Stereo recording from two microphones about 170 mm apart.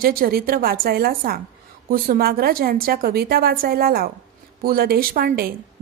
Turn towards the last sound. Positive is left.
turn(degrees=-65)  # may be behind; listen again after turning